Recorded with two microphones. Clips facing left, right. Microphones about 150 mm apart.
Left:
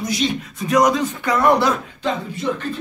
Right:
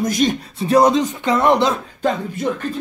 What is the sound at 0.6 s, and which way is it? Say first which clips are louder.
Speech: right 3 dB; 30° right (ahead or behind).